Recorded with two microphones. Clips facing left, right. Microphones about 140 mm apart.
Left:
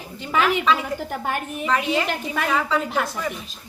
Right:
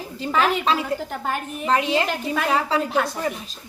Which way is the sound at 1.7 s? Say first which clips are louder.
Right 2 dB; 30° right (ahead or behind).